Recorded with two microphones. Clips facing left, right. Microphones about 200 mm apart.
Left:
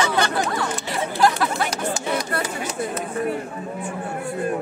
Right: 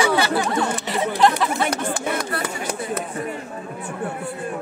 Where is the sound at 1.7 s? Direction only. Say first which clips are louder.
Even; 60° right (ahead or behind).